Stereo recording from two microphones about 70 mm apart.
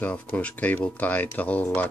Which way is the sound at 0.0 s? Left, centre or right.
Left.